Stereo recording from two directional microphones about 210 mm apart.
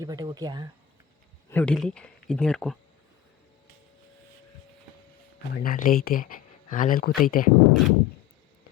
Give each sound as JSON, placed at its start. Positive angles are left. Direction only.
{"t": 0.0, "sound": "speech", "side_deg": -15}
{"t": 1.5, "sound": "speech", "side_deg": 5}
{"t": 5.5, "sound": "speech", "side_deg": 45}
{"t": 7.7, "sound": "speech", "side_deg": 0}